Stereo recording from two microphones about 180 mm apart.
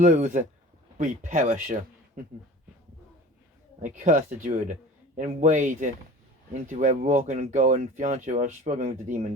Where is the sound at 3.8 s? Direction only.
40° right (ahead or behind).